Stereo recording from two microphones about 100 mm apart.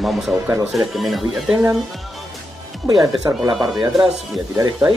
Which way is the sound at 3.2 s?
30° right (ahead or behind).